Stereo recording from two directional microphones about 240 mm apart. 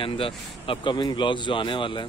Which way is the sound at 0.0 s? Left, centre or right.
Left.